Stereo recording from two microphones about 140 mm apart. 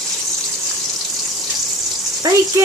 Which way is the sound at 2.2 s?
25° right (ahead or behind).